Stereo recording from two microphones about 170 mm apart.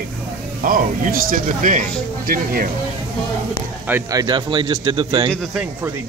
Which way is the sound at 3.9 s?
15° right (ahead or behind).